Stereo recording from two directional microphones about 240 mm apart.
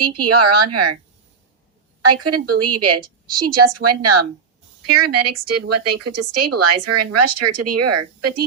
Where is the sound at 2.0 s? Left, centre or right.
Right.